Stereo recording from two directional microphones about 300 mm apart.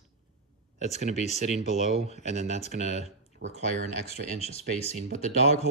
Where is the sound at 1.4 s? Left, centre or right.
Right.